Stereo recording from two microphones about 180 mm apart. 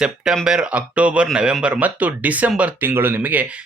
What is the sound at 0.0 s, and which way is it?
Speech, 5° right (ahead or behind).